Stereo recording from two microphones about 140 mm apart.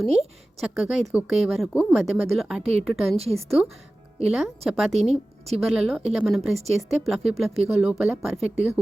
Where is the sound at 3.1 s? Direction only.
45° right (ahead or behind).